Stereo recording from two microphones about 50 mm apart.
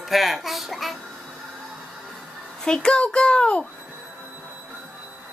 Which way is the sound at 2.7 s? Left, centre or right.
Centre.